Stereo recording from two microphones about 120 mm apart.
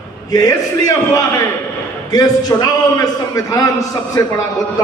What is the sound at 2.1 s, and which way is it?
A man's voice, 35° left (ahead or behind).